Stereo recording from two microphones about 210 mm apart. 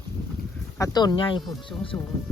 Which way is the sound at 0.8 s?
20° left (ahead or behind).